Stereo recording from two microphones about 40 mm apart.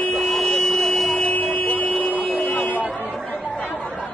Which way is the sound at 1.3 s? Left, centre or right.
Left.